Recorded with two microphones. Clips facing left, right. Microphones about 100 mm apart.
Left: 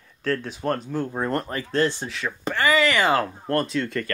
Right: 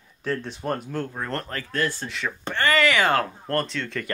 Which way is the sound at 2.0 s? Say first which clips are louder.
Left 2 dB; centre (ahead or behind).